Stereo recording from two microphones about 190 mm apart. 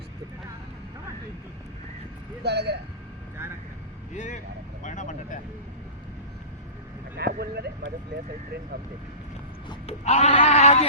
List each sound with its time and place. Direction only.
2.4 s speech: 60° right (ahead or behind)
4.1 s speech: 40° left (ahead or behind)
7.2 s speech: 60° right (ahead or behind)
9.6 s speech: 35° left (ahead or behind)